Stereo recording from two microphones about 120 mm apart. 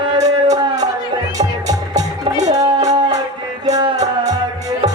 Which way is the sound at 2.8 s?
70° right (ahead or behind).